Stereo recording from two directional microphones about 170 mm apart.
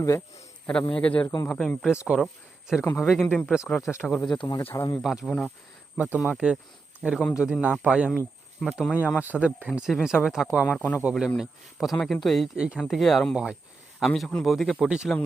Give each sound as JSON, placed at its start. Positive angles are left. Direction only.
{"t": 0.7, "sound": "a man's voice", "side_deg": 5}
{"t": 4.3, "sound": "a man's voice", "side_deg": 25}
{"t": 5.0, "sound": "speech", "side_deg": 0}
{"t": 9.0, "sound": "a man's voice", "side_deg": 15}
{"t": 9.2, "sound": "speech", "side_deg": -10}